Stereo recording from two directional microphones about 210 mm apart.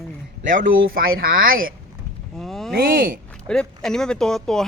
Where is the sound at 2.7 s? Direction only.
45° right (ahead or behind).